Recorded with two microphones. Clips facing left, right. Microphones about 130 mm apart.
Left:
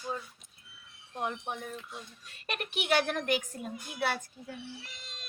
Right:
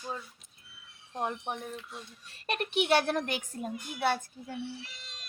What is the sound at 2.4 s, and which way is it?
Speech, 35° right (ahead or behind).